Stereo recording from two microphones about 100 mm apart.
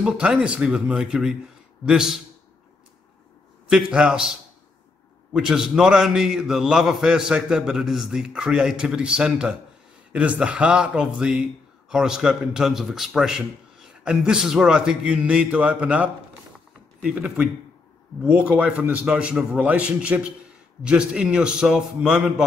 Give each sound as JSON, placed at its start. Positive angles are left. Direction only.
{"t": 0.0, "sound": "a man's voice", "side_deg": -10}
{"t": 3.7, "sound": "speech", "side_deg": -10}
{"t": 5.3, "sound": "a man's voice", "side_deg": -5}